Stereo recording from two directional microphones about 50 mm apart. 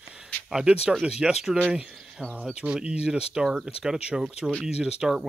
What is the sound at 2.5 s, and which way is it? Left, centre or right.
Speech, centre.